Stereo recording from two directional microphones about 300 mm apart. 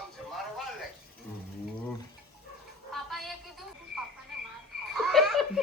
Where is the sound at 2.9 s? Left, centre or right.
Centre.